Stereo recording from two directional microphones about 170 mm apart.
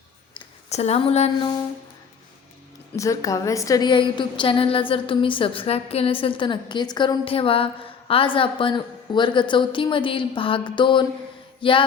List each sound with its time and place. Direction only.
0.3 s speech: 40° left (ahead or behind)
2.9 s a woman's voice: 20° left (ahead or behind)